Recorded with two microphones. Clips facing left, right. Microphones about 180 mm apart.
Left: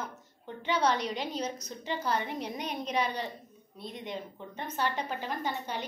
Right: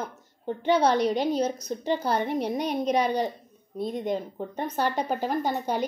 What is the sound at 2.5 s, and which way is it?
A woman's voice, 40° right (ahead or behind).